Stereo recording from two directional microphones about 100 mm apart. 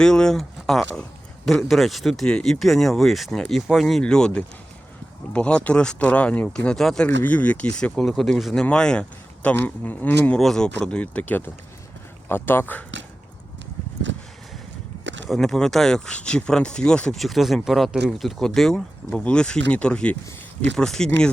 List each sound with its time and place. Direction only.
0.0 s speech: 5° left (ahead or behind)
7.2 s speech: 15° left (ahead or behind)
15.3 s speech: centre (ahead or behind)